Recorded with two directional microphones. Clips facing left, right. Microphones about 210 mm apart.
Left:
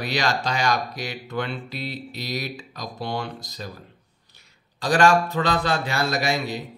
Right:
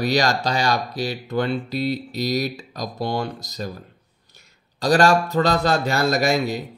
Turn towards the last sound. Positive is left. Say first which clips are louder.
# right 5 dB
turn(degrees=-45)  # may be behind; listen again after turning